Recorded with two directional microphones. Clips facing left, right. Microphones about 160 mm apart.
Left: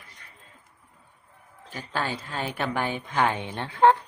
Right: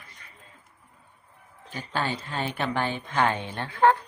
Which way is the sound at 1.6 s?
5° left (ahead or behind).